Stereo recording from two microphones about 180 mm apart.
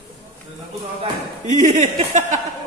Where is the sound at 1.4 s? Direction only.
45° right (ahead or behind).